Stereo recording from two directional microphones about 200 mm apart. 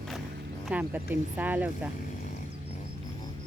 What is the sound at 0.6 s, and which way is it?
Speech, 5° right (ahead or behind).